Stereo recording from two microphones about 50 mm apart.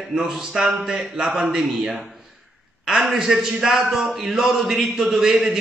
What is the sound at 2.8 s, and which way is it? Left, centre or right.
A man's voice, centre.